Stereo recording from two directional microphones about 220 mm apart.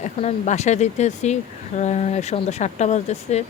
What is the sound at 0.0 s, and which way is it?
A woman's voice, 30° left (ahead or behind).